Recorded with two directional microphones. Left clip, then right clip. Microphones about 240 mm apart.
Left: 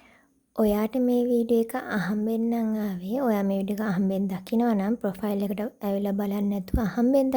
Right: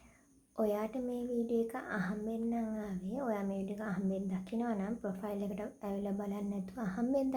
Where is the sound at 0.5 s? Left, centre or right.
Left.